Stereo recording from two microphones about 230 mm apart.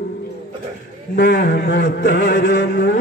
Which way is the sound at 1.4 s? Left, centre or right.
Left.